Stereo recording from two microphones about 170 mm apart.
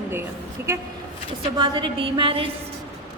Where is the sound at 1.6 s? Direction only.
30° right (ahead or behind).